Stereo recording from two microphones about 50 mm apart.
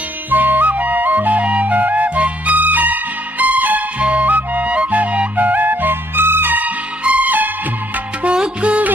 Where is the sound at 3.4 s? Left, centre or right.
Right.